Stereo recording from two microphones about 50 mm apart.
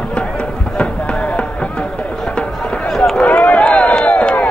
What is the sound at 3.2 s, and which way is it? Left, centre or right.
Run, left.